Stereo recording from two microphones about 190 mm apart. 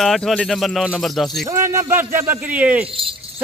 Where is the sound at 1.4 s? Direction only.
15° right (ahead or behind).